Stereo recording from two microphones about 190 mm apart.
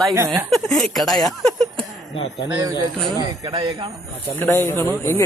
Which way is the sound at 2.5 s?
15° right (ahead or behind).